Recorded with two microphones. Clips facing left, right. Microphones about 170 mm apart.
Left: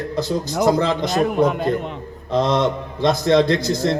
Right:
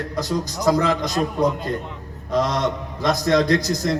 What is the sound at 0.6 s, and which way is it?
Speech, 30° left (ahead or behind).